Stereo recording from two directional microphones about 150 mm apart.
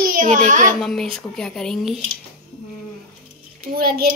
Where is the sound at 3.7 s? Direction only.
80° right.